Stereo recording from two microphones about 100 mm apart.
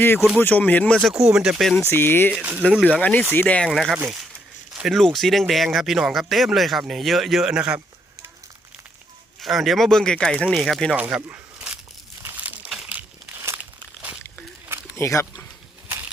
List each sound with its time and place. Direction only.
0.0 s speech: 20° left (ahead or behind)
1.0 s speech: 5° right (ahead or behind)
1.9 s speech: 20° left (ahead or behind)
2.3 s speech: 10° right (ahead or behind)
2.8 s speech: 15° left (ahead or behind)
3.7 s speech: centre (ahead or behind)
4.7 s a sound: 5° right (ahead or behind)
5.0 s speech: centre (ahead or behind)
9.4 s speech: centre (ahead or behind)
10.9 s a sound: 15° right (ahead or behind)
12.4 s crumpling: 15° right (ahead or behind)
12.7 s crumpling: 5° right (ahead or behind)
13.0 s a sound: 25° right (ahead or behind)
14.9 s speech: 25° left (ahead or behind)